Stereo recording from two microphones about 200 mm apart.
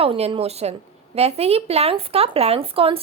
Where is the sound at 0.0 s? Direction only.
30° right (ahead or behind).